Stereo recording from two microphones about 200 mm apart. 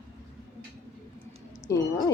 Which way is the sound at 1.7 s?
15° left (ahead or behind).